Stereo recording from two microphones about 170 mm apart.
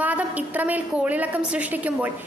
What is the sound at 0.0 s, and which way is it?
A woman's voice, 10° right (ahead or behind).